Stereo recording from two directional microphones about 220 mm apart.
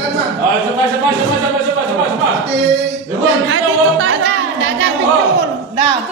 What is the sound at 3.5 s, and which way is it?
Music, 65° right (ahead or behind).